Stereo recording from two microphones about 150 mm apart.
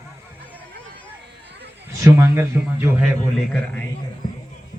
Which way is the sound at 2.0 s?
15° right (ahead or behind).